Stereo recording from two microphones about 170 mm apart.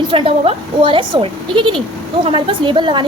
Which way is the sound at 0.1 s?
30° right (ahead or behind).